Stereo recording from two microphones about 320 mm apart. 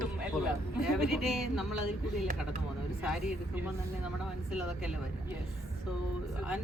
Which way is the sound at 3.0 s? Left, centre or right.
Centre.